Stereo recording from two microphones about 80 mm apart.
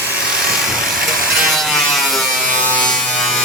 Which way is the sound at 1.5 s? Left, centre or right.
Centre.